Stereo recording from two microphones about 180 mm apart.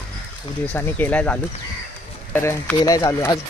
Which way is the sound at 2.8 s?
20° left (ahead or behind).